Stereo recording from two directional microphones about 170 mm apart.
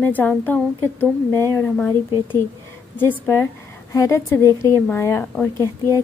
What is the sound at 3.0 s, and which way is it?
A woman's voice, 10° left (ahead or behind).